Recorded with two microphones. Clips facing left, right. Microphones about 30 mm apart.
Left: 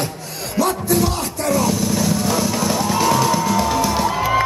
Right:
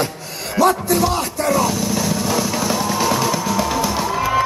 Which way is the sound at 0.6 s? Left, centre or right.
Centre.